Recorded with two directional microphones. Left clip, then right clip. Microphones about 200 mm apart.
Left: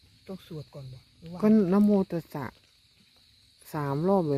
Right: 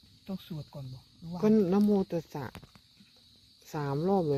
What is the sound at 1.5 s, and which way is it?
Speech, 30° left (ahead or behind).